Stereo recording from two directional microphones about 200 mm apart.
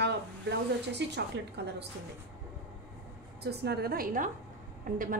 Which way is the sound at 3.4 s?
55° right (ahead or behind).